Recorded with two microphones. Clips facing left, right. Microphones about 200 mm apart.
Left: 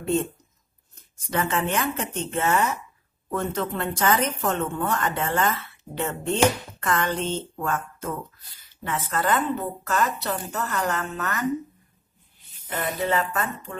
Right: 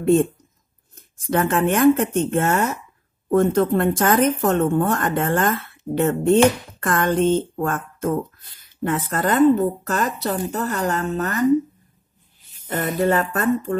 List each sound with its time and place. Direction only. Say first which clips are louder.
0.0 s a woman's voice: right 8 dB; 50° right (ahead or behind)
12.6 s a woman's voice: right 6 dB; 45° right (ahead or behind)